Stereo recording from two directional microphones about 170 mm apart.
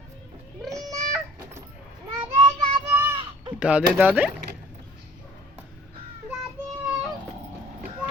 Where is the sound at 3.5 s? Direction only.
5° right (ahead or behind).